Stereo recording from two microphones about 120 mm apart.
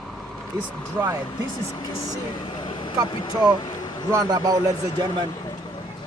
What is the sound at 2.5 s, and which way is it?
Vehicle, 45° left (ahead or behind).